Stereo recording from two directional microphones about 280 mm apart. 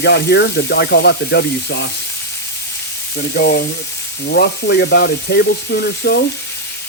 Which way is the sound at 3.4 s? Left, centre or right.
Left.